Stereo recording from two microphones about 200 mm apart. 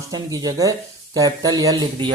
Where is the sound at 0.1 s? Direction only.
20° right (ahead or behind).